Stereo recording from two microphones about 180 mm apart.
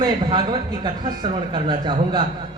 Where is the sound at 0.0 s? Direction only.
25° right (ahead or behind).